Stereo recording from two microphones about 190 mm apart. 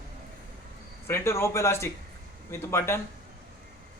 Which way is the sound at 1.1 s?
15° left (ahead or behind).